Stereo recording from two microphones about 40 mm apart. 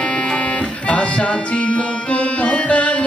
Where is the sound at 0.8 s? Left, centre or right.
Left.